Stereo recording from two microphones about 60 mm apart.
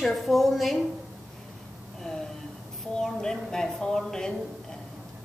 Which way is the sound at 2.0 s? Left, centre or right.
Centre.